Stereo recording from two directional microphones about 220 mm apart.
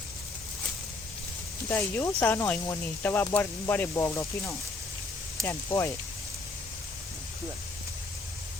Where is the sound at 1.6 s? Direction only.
10° left (ahead or behind).